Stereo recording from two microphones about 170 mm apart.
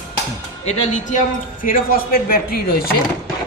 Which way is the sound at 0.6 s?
40° left (ahead or behind).